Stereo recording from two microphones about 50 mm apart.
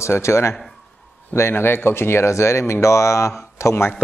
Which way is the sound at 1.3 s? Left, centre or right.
Left.